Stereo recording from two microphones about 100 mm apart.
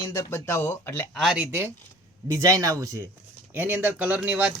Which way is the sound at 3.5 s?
15° right (ahead or behind).